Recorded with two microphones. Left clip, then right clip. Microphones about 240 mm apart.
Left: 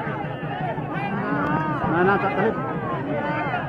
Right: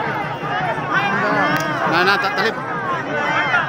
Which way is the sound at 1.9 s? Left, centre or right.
Right.